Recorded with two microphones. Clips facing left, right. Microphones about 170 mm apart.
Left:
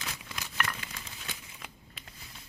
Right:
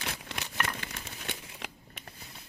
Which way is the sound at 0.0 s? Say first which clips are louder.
Right 3 dB; 65° right (ahead or behind).